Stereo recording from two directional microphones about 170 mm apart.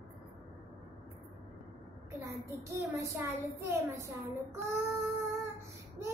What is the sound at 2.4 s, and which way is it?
Child singing, 15° right (ahead or behind).